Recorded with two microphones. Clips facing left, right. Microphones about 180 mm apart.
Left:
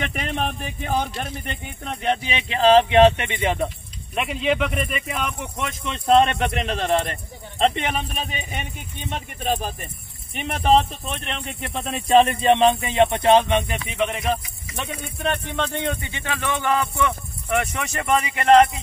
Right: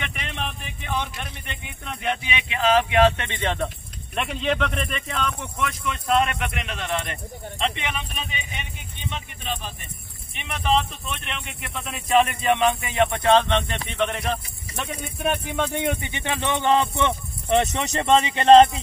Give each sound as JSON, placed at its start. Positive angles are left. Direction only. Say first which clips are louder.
{"t": 0.0, "sound": "speech", "louder": "left 6 dB", "side_deg": 40}